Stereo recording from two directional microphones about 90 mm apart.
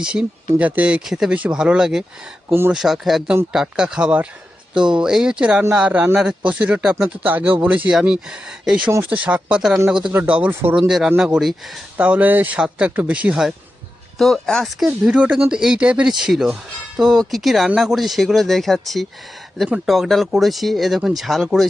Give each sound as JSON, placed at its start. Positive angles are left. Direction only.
{"t": 0.0, "sound": "speech", "side_deg": -10}
{"t": 2.5, "sound": "speech", "side_deg": -25}
{"t": 2.7, "sound": "speech", "side_deg": -5}
{"t": 10.1, "sound": "speech", "side_deg": -20}
{"t": 11.9, "sound": "speech", "side_deg": -15}
{"t": 14.2, "sound": "speech", "side_deg": 0}
{"t": 14.8, "sound": "speech", "side_deg": -15}